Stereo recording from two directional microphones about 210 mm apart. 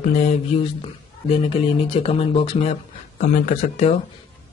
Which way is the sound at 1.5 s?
25° left (ahead or behind).